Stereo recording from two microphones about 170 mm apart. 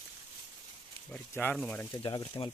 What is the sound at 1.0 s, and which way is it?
Speech, 10° left (ahead or behind).